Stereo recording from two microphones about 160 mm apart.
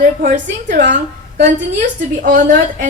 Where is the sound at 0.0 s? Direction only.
55° right (ahead or behind).